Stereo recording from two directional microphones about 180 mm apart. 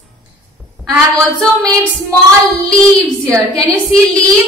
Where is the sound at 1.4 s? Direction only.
5° left (ahead or behind).